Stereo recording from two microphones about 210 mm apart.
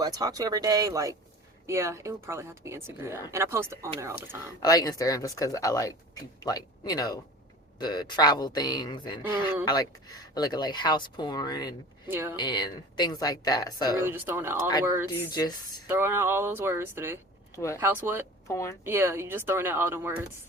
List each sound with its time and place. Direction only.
0.0 s speech: 15° right (ahead or behind)
4.6 s speech: 15° left (ahead or behind)
12.0 s speech: 10° right (ahead or behind)
12.4 s speech: 20° left (ahead or behind)
13.9 s speech: 10° right (ahead or behind)
15.3 s speech: 20° left (ahead or behind)
15.9 s speech: 10° right (ahead or behind)
17.5 s speech: 15° left (ahead or behind)
17.7 s speech: 10° right (ahead or behind)
18.4 s speech: 15° left (ahead or behind)
18.9 s speech: 10° right (ahead or behind)